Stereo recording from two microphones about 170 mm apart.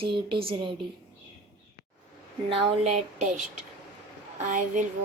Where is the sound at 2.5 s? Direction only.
35° right (ahead or behind).